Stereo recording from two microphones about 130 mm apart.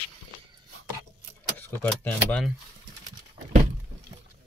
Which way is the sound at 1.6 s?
15° left (ahead or behind).